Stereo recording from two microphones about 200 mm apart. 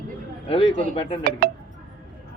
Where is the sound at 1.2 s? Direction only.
50° right (ahead or behind).